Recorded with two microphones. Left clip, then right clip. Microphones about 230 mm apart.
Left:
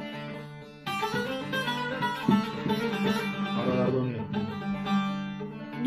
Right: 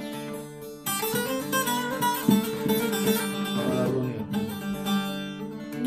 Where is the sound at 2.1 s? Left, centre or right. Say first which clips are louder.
Right 3 dB; right.